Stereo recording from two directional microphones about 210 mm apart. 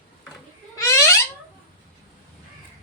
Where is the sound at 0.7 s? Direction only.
15° left (ahead or behind).